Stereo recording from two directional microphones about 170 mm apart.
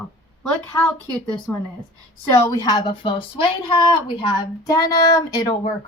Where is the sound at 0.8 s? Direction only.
5° left (ahead or behind).